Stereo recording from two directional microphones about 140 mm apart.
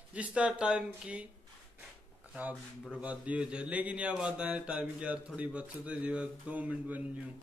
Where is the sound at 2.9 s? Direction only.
10° right (ahead or behind).